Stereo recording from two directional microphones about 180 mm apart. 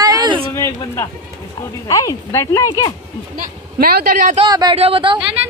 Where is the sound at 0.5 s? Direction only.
15° left (ahead or behind).